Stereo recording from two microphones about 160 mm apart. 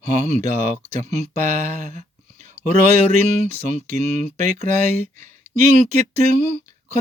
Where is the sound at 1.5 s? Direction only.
50° right (ahead or behind).